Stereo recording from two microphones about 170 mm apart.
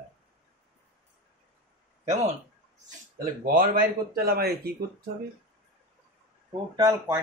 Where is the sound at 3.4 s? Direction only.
55° right (ahead or behind).